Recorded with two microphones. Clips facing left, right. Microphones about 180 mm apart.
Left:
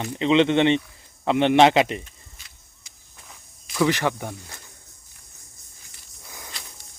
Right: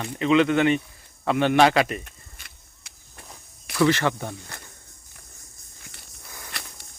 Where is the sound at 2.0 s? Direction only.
60° right (ahead or behind).